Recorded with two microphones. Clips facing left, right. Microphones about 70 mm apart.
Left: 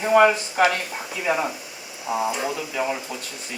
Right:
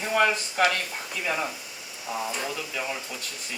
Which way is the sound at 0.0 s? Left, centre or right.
Centre.